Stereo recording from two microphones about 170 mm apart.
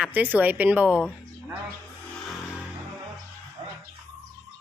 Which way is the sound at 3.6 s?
25° right (ahead or behind).